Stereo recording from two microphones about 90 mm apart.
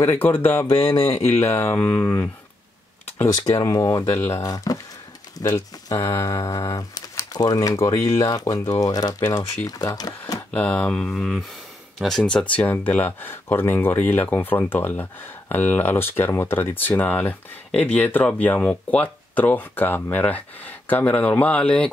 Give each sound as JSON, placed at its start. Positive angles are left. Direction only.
{"t": 0.0, "sound": "speech", "side_deg": 20}
{"t": 3.5, "sound": "speech", "side_deg": 40}
{"t": 6.0, "sound": "speech", "side_deg": 30}
{"t": 7.7, "sound": "speech", "side_deg": 35}
{"t": 10.5, "sound": "speech", "side_deg": 15}